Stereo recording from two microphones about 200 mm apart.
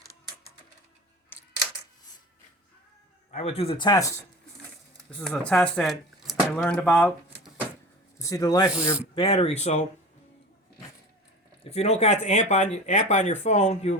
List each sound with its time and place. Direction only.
3.3 s speech: 30° left (ahead or behind)
5.1 s speech: 5° left (ahead or behind)
8.7 s speech: 5° right (ahead or behind)
9.1 s speech: 30° left (ahead or behind)
11.6 s speech: 30° left (ahead or behind)